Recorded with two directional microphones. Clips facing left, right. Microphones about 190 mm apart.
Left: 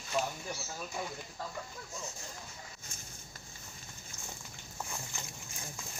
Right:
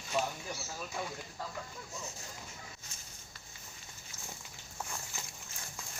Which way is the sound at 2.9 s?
50° left (ahead or behind).